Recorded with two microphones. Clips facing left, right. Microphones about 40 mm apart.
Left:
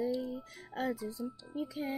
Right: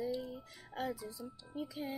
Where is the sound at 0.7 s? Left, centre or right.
Left.